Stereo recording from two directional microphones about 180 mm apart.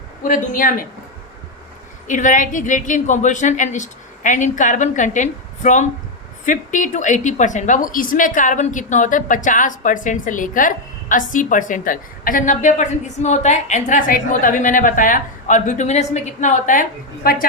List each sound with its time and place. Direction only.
0.2 s a woman's voice: 45° left (ahead or behind)
2.0 s a woman's voice: 45° left (ahead or behind)